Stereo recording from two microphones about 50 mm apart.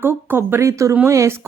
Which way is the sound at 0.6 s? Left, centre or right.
Right.